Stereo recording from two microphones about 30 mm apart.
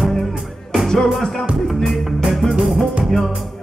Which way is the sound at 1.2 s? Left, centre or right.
Centre.